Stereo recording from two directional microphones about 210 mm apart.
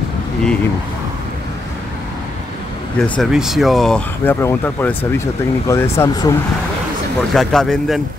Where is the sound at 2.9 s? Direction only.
5° left (ahead or behind).